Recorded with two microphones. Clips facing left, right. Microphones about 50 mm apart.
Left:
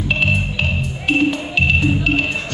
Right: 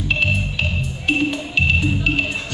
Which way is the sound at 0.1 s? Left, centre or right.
Centre.